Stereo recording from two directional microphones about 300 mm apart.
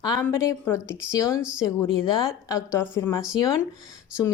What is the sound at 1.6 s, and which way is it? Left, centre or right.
Speech, centre.